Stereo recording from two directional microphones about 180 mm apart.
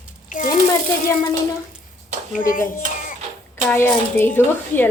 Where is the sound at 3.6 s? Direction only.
10° left (ahead or behind).